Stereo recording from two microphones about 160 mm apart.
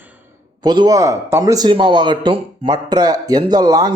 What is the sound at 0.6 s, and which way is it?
A man's voice, 25° right (ahead or behind).